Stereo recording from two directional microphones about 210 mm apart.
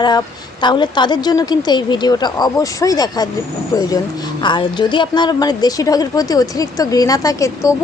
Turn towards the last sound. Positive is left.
turn(degrees=15)  # may be behind; listen again after turning